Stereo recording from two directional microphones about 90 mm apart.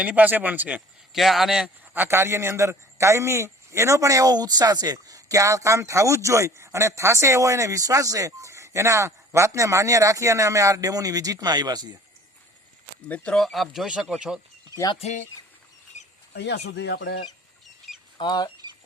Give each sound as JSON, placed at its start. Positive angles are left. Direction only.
{"t": 0.0, "sound": "speech", "side_deg": -15}
{"t": 1.1, "sound": "speech", "side_deg": 0}
{"t": 1.9, "sound": "a man's voice", "side_deg": -25}
{"t": 13.1, "sound": "speech", "side_deg": 15}
{"t": 13.3, "sound": "speech", "side_deg": 0}
{"t": 18.2, "sound": "speech", "side_deg": 50}